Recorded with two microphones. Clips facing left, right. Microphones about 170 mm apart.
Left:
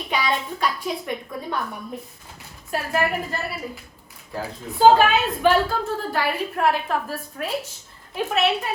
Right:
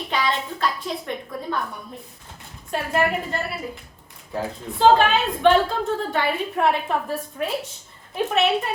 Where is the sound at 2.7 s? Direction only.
5° left (ahead or behind).